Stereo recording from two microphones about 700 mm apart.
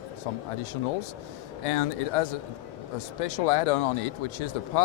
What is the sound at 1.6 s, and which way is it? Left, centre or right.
Speech, left.